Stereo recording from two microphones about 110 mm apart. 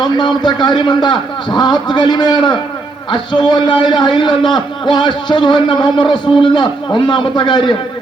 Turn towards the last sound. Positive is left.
turn(degrees=45)  # may be behind; listen again after turning